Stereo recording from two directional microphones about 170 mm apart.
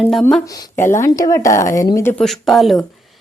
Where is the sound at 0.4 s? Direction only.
20° left (ahead or behind).